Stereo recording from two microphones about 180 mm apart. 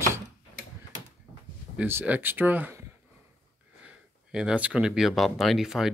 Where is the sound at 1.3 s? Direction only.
30° right (ahead or behind).